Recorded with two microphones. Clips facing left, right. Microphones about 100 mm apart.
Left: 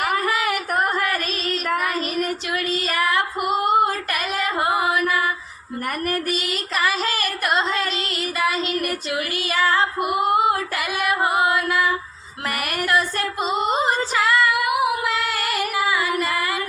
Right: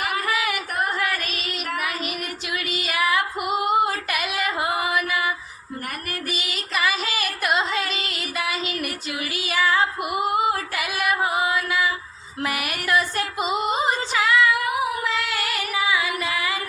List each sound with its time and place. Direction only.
0.0 s music: 45° left (ahead or behind)
2.6 s music: 5° right (ahead or behind)
3.7 s female singing: 5° right (ahead or behind)
6.3 s music: centre (ahead or behind)
9.3 s female singing: 5° right (ahead or behind)
11.0 s music: 5° right (ahead or behind)
11.4 s mantra: centre (ahead or behind)
12.9 s female singing: 5° right (ahead or behind)
15.0 s music: centre (ahead or behind)